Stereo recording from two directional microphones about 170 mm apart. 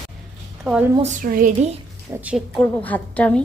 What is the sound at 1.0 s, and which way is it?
Speech, 50° right (ahead or behind).